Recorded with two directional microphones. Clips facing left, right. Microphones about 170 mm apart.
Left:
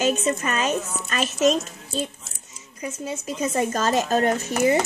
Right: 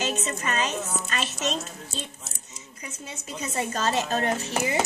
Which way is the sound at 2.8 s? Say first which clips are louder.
Left 10 dB; 40° left (ahead or behind).